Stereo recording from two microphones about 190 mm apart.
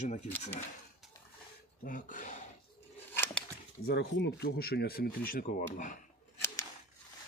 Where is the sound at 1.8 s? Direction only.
45° left (ahead or behind).